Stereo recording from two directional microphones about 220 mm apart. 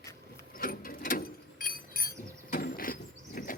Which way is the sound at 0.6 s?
40° left (ahead or behind).